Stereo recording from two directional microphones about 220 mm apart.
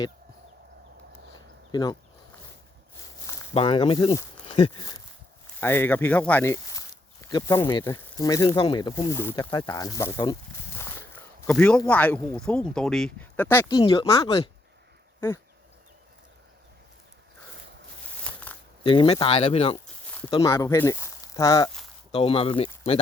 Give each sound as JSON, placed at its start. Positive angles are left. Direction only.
{"t": 1.7, "sound": "speech", "side_deg": 20}
{"t": 3.5, "sound": "speech", "side_deg": 25}
{"t": 4.4, "sound": "a sound", "side_deg": 30}
{"t": 4.8, "sound": "speech", "side_deg": 20}
{"t": 18.2, "sound": "a sound", "side_deg": 5}
{"t": 18.8, "sound": "speech", "side_deg": 20}
{"t": 20.3, "sound": "speech", "side_deg": 15}